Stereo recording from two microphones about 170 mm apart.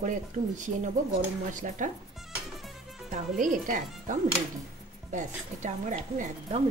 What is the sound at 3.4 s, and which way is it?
Speech, 50° right (ahead or behind).